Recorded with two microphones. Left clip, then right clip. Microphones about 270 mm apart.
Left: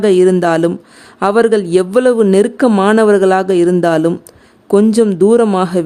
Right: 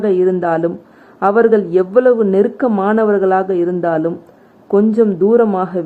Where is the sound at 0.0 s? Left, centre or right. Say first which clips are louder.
Left 4 dB; left.